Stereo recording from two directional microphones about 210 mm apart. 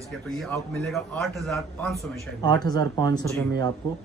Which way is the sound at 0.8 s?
Centre (ahead or behind).